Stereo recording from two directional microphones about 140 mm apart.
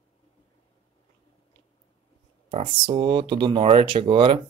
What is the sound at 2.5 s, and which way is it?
Speech, 40° right (ahead or behind).